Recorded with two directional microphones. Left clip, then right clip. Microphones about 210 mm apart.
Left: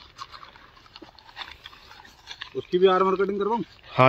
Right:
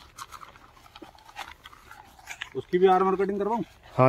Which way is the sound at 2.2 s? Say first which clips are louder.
Left 1 dB; 20° right (ahead or behind).